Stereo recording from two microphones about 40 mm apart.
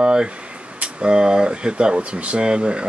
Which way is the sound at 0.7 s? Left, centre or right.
Right.